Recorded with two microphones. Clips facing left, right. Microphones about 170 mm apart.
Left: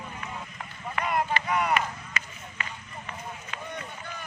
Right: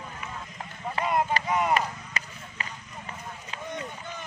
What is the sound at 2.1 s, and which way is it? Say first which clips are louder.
Run: even; 35° right (ahead or behind).